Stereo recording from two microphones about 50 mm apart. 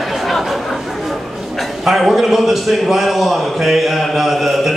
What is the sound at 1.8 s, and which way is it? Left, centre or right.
A man's voice, centre.